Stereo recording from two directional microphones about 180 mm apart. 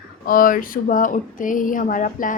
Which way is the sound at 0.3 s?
50° left (ahead or behind).